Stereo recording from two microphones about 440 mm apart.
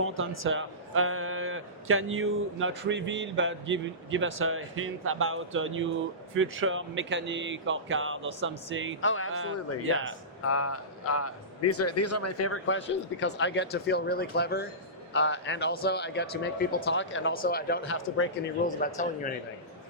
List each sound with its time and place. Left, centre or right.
0.0 s a man's voice: right
9.0 s a man's voice: left
9.3 s a man's voice: right
10.4 s a man's voice: left